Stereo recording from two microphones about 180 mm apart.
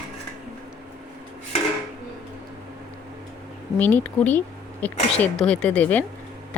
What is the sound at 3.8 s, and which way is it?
Speech, 10° left (ahead or behind).